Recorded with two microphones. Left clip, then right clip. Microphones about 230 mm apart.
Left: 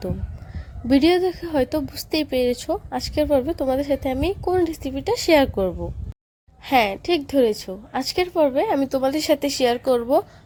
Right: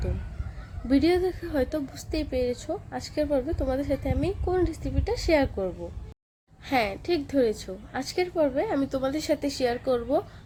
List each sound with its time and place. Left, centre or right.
0.9 s a woman's voice: left